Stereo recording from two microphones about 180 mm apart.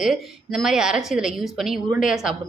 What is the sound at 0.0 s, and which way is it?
Speech, centre (ahead or behind).